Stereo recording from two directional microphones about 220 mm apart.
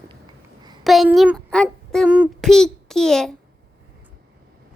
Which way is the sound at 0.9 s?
Centre (ahead or behind).